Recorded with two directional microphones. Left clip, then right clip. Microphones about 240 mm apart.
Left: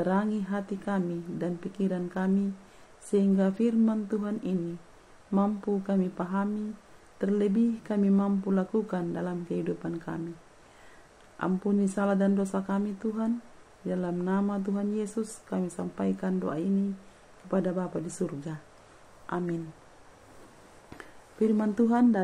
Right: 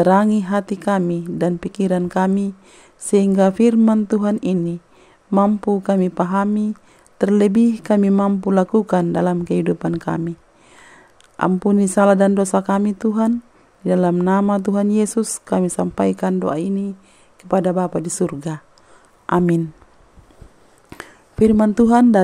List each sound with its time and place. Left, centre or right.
0.0 s speech: right
11.3 s speech: right
20.9 s speech: right